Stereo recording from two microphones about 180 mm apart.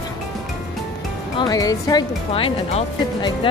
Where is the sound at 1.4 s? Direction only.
20° left (ahead or behind).